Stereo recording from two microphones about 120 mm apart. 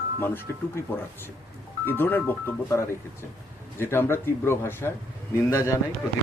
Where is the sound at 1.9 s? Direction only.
15° left (ahead or behind).